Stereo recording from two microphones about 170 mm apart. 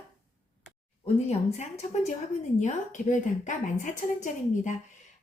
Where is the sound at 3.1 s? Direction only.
45° left (ahead or behind).